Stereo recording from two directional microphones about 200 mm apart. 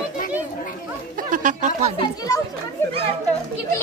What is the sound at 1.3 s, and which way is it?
Speech, 40° right (ahead or behind).